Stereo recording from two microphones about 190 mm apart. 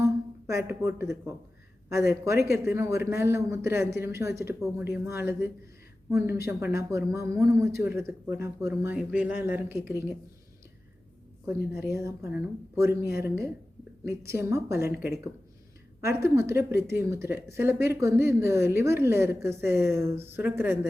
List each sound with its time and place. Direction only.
0.0 s speech: 15° right (ahead or behind)
11.4 s speech: 15° right (ahead or behind)
16.3 s speech: 15° right (ahead or behind)